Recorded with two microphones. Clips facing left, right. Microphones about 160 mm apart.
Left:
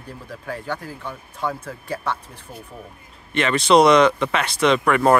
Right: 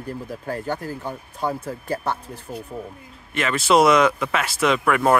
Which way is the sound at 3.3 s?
5° right (ahead or behind).